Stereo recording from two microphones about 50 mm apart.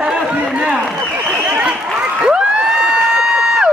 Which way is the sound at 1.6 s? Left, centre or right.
Right.